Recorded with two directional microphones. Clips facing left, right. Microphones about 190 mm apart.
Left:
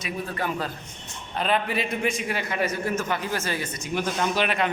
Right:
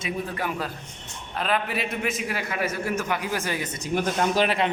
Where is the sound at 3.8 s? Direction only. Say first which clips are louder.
Right 3 dB; 45° right (ahead or behind).